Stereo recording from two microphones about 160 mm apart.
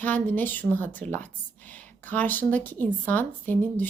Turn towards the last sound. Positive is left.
turn(degrees=10)  # may be behind; listen again after turning